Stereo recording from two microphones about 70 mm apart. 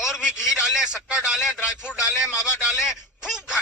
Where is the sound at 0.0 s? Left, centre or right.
Centre.